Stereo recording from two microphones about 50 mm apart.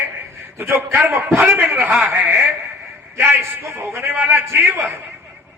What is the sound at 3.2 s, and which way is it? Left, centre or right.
A man's voice, right.